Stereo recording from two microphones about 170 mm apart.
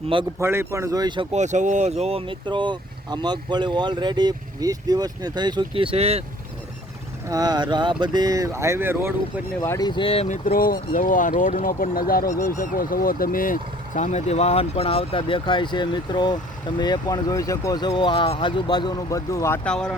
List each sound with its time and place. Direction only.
0.3 s speech: 15° right (ahead or behind)
1.3 s speech: 45° right (ahead or behind)
7.3 s speech: 20° right (ahead or behind)
9.6 s speech: 20° left (ahead or behind); by 12.2 s 60° left (ahead or behind)
12.2 s speech: 15° left (ahead or behind)
12.6 s speech: 55° left (ahead or behind); by 19.5 s 20° left (ahead or behind)
19.6 s speech: 5° left (ahead or behind)